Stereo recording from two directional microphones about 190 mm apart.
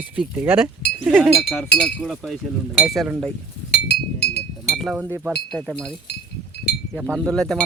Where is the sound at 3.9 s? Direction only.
60° left (ahead or behind).